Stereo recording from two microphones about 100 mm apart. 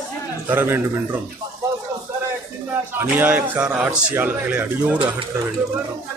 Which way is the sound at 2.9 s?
20° right (ahead or behind).